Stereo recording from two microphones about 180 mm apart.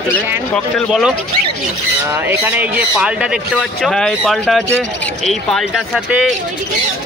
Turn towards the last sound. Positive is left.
turn(degrees=0)  # may be behind; listen again after turning